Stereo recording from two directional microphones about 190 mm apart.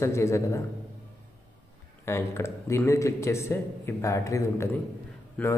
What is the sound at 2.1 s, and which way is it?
A man's voice, 15° left (ahead or behind).